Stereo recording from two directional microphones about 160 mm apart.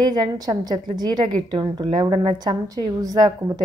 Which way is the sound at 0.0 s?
25° right (ahead or behind).